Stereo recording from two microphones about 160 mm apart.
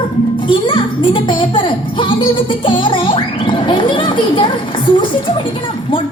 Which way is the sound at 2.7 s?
30° left (ahead or behind).